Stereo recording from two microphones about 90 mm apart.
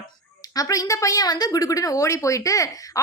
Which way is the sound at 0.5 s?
45° left (ahead or behind).